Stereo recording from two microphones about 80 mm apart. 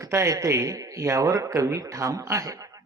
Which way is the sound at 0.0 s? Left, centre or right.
Right.